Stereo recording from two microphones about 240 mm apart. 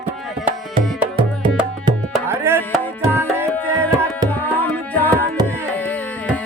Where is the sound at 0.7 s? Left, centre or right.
Right.